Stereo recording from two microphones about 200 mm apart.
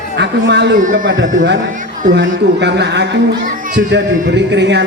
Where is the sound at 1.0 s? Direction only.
70° right (ahead or behind).